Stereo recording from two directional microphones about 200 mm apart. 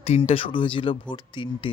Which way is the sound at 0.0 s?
30° left (ahead or behind).